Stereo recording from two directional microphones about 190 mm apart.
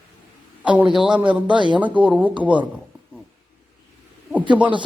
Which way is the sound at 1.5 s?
25° right (ahead or behind).